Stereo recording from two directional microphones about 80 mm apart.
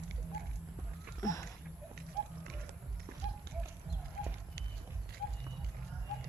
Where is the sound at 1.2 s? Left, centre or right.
Left.